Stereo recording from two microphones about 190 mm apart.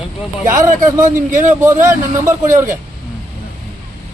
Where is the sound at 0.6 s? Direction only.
40° right (ahead or behind).